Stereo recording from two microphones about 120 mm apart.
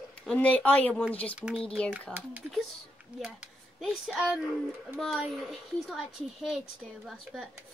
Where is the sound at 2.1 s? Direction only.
15° right (ahead or behind).